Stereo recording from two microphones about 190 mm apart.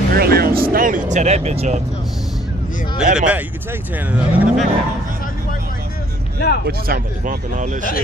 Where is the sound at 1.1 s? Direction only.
35° right (ahead or behind).